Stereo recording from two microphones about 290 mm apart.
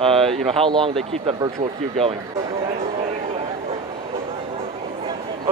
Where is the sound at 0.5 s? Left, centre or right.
Centre.